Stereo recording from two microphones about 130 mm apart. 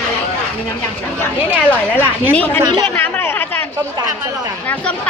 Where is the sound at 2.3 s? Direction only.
15° left (ahead or behind).